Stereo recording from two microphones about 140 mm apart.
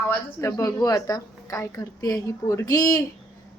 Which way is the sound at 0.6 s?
25° left (ahead or behind).